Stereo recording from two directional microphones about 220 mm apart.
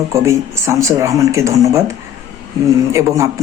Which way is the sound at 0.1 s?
15° right (ahead or behind).